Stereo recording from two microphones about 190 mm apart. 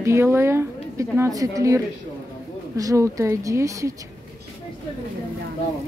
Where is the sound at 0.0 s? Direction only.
15° right (ahead or behind).